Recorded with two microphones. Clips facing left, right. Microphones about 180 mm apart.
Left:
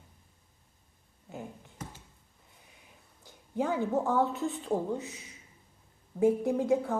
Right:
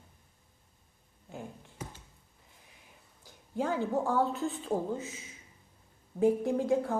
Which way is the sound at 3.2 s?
Centre (ahead or behind).